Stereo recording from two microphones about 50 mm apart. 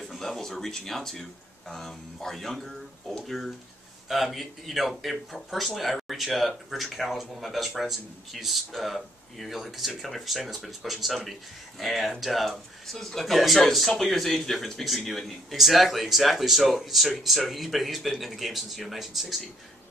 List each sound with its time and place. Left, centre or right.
0.2 s speech: centre